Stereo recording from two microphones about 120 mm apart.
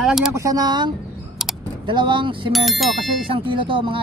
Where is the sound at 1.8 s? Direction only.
40° right (ahead or behind).